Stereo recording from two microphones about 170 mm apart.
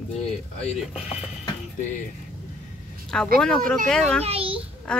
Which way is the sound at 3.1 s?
5° left (ahead or behind).